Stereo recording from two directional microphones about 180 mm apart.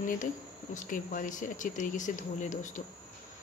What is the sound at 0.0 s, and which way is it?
Speech, 45° left (ahead or behind).